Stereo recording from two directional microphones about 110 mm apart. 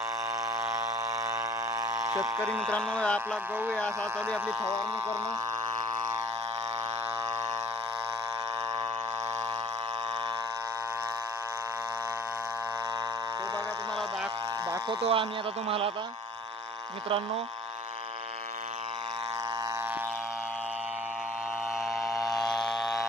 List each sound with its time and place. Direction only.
0.5 s a sound: 20° right (ahead or behind)
2.5 s speech: 5° left (ahead or behind)
4.6 s speech: 30° right (ahead or behind)
14.8 s sheep: 55° right (ahead or behind)
17.1 s speech: 60° right (ahead or behind)